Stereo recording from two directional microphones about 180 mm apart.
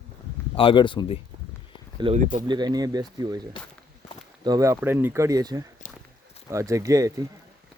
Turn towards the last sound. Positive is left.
turn(degrees=-20)  # may be behind; listen again after turning